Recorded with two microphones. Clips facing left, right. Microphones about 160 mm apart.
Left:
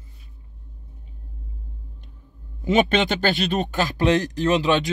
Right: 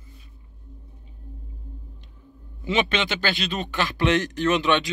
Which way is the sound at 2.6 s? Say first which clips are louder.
Left 5 dB; 45° left (ahead or behind).